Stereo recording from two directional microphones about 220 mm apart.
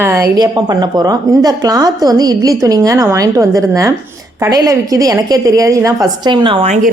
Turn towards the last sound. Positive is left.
turn(degrees=-30)  # may be behind; listen again after turning